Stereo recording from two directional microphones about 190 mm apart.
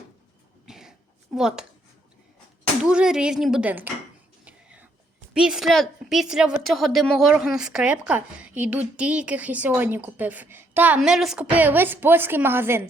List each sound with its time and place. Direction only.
0.6 s cough: 5° right (ahead or behind)
1.4 s a woman's voice: 5° right (ahead or behind)
2.8 s a woman's voice: 5° right (ahead or behind)
4.4 s whispering: 5° right (ahead or behind)
5.3 s a woman's voice: 5° right (ahead or behind)